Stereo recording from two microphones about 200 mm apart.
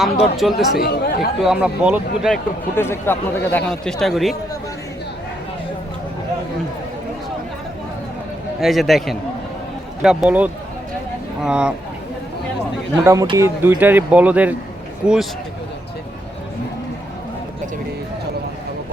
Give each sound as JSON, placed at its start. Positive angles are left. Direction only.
{"t": 0.0, "sound": "speech", "side_deg": 0}
{"t": 0.8, "sound": "speech", "side_deg": 50}
{"t": 1.5, "sound": "speech", "side_deg": -5}
{"t": 2.7, "sound": "speech", "side_deg": 10}
{"t": 8.6, "sound": "speech", "side_deg": 0}
{"t": 13.1, "sound": "speech", "side_deg": -15}